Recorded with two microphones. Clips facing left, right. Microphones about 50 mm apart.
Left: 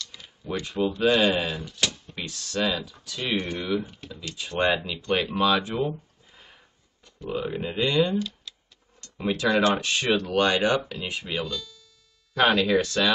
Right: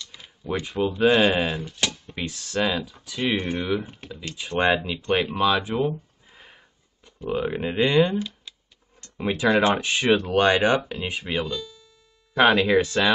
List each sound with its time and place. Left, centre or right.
0.0 s speech: centre
7.1 s speech: right